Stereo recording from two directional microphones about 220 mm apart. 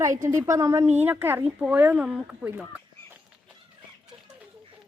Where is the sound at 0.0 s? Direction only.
15° right (ahead or behind).